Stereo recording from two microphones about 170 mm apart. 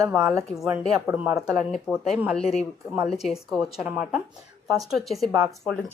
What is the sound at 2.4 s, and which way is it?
Speech, 40° left (ahead or behind).